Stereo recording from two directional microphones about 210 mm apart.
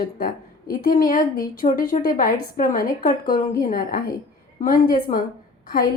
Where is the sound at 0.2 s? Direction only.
40° left (ahead or behind).